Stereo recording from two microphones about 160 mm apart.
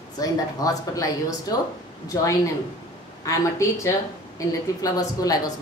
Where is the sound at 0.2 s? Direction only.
20° left (ahead or behind).